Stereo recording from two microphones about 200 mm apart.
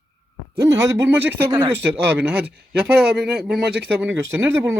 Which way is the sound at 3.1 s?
Centre (ahead or behind).